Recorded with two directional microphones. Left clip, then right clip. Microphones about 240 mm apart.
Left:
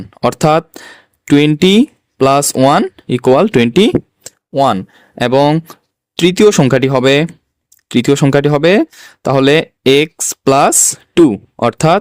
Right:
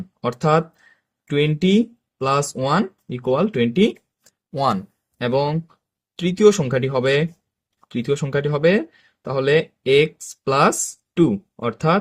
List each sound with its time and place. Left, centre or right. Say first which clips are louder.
0.2 s speech: left 8 dB; left
4.2 s a sound: left 7 dB; left
5.1 s speech: left 10 dB; left